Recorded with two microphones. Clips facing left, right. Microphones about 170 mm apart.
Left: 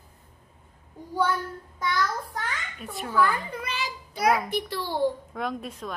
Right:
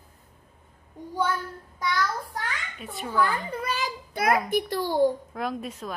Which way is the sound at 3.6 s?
45° right (ahead or behind).